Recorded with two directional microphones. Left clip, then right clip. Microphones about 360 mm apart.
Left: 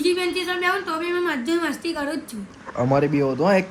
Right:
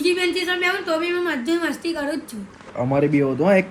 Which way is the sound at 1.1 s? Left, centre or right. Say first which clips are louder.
Right 1 dB; centre.